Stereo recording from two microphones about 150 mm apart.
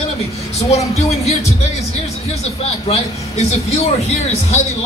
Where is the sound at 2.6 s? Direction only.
45° left (ahead or behind).